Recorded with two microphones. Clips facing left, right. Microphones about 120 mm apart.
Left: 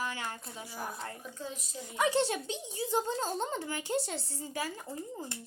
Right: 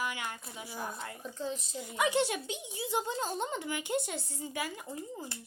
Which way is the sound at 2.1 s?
35° left (ahead or behind).